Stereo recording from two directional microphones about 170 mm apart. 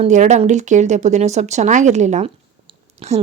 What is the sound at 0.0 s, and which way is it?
Speech, 45° right (ahead or behind).